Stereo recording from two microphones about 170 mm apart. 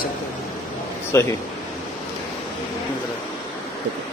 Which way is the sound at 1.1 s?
15° left (ahead or behind).